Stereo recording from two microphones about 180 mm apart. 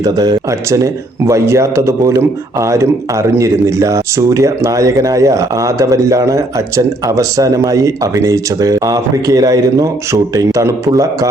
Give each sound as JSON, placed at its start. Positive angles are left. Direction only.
{"t": 0.0, "sound": "speech", "side_deg": -20}